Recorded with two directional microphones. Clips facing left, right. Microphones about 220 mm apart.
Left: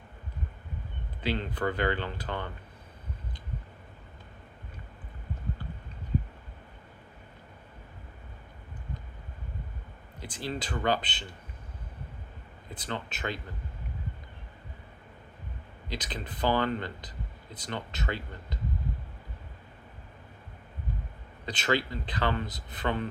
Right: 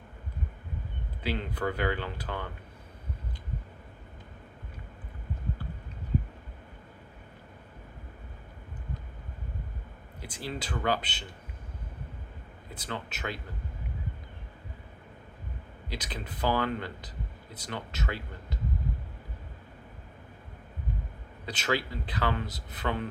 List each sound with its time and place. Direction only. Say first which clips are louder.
1.2 s speech: left 1 dB; 10° right (ahead or behind)
10.2 s speech: left 2 dB; 10° right (ahead or behind)
12.7 s speech: left 1 dB; 10° right (ahead or behind)
15.9 s speech: left 1 dB; 10° right (ahead or behind)
21.4 s speech: left 2 dB; 10° right (ahead or behind)